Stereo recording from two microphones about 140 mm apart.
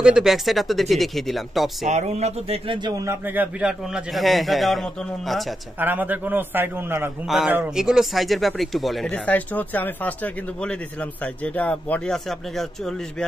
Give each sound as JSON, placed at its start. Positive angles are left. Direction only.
{"t": 0.0, "sound": "speech", "side_deg": -5}
{"t": 1.9, "sound": "speech", "side_deg": -55}
{"t": 2.8, "sound": "speech", "side_deg": -20}
{"t": 5.8, "sound": "a man's voice", "side_deg": -15}
{"t": 7.2, "sound": "speech", "side_deg": -5}